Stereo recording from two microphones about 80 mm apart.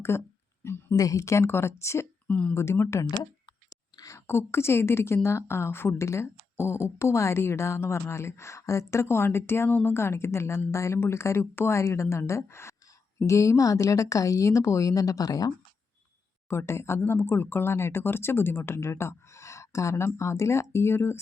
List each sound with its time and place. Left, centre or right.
0.1 s a woman's voice: left
0.9 s a woman's voice: left
2.2 s speech: centre
2.6 s a woman's voice: left
3.7 s chewing: left
4.3 s a woman's voice: left
16.5 s a woman's voice: left